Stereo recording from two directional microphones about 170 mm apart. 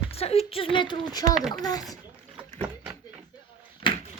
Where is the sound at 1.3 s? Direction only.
Centre (ahead or behind).